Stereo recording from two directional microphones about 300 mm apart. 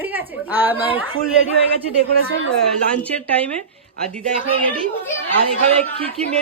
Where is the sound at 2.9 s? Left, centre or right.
Centre.